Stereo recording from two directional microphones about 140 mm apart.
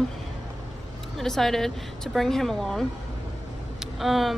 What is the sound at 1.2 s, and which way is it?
Speech, centre (ahead or behind).